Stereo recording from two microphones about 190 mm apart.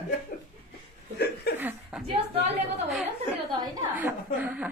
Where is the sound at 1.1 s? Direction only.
60° left (ahead or behind).